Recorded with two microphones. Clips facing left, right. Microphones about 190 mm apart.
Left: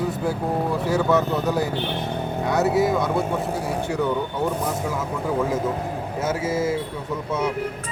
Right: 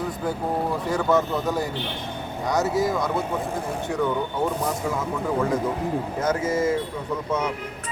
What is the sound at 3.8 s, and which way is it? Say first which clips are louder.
Speech: right 1 dB; 10° left (ahead or behind).